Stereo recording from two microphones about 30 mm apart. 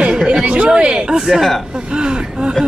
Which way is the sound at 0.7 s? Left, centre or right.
Right.